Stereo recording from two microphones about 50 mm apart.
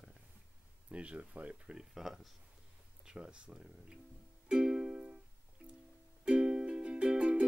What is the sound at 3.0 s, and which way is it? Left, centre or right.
Speech, centre.